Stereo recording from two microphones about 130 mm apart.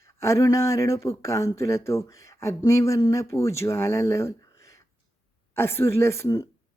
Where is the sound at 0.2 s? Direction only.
25° left (ahead or behind).